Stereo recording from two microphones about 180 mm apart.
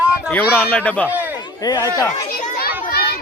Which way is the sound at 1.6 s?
20° left (ahead or behind).